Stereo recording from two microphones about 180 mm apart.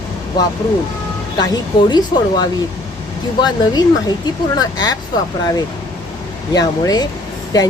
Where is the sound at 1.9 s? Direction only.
25° left (ahead or behind).